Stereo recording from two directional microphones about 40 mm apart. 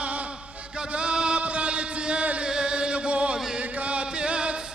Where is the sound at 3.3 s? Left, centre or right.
Centre.